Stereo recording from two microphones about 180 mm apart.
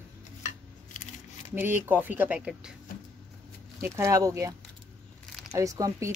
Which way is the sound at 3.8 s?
15° right (ahead or behind).